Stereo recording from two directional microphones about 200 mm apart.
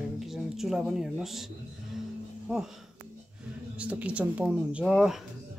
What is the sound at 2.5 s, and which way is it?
Speech, 5° right (ahead or behind).